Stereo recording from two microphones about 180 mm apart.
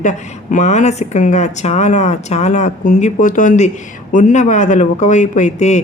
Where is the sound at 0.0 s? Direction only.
45° left (ahead or behind).